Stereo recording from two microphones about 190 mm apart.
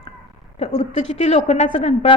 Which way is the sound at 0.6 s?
35° left (ahead or behind).